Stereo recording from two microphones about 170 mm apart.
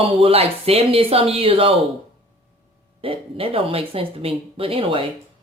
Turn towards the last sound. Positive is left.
turn(degrees=-30)  # may be behind; listen again after turning